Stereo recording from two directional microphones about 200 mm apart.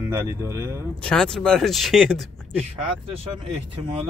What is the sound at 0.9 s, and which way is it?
Speech, 5° left (ahead or behind).